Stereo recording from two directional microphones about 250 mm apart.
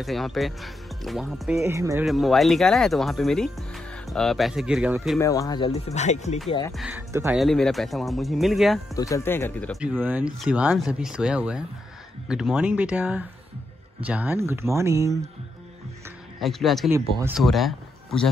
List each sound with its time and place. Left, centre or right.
0.0 s speech: centre
1.6 s speech: centre
2.0 s speech: centre
5.2 s speech: centre
5.9 s speech: left
6.7 s speech: centre
7.3 s speech: centre
8.9 s speech: centre
16.3 s speech: centre
16.9 s speech: centre